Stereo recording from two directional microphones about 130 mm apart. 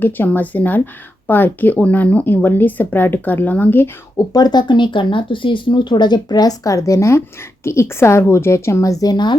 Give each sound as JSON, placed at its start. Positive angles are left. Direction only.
{"t": 0.0, "sound": "speech", "side_deg": 15}
{"t": 4.3, "sound": "speech", "side_deg": 30}